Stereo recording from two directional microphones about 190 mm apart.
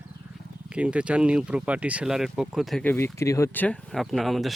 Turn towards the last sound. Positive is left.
turn(degrees=0)  # may be behind; listen again after turning